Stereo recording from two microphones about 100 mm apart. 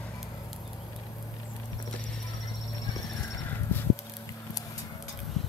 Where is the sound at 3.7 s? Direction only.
20° left (ahead or behind).